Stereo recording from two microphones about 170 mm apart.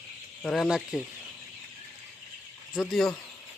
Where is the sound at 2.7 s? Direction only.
Centre (ahead or behind).